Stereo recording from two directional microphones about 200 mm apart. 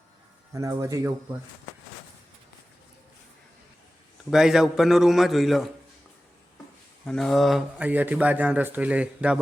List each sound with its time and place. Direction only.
0.5 s speech: 15° right (ahead or behind)
4.3 s a man's voice: centre (ahead or behind)
7.0 s speech: 5° left (ahead or behind)